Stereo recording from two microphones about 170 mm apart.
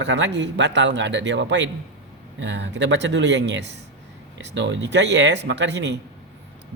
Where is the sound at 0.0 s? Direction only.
90° right.